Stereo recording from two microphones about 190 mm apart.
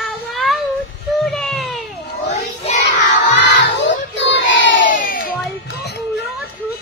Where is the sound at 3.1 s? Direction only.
65° left (ahead or behind).